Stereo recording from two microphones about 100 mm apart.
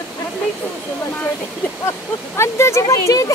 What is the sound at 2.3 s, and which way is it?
Speech, 30° left (ahead or behind).